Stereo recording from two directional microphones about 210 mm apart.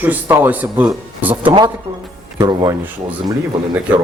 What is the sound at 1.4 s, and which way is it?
Speech, 25° right (ahead or behind).